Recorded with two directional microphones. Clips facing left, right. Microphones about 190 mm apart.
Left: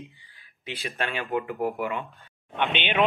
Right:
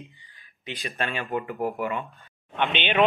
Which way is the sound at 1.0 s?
15° left (ahead or behind).